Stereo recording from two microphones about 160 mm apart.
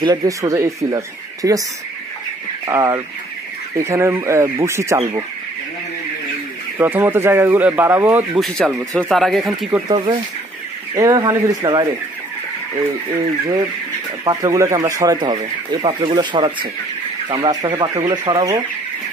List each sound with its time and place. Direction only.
0.0 s speech: 25° right (ahead or behind)
2.6 s speech: 20° right (ahead or behind)
6.8 s speech: 10° right (ahead or behind)
8.4 s speech: centre (ahead or behind)
9.8 s speech: 30° right (ahead or behind)
14.2 s speech: 25° right (ahead or behind)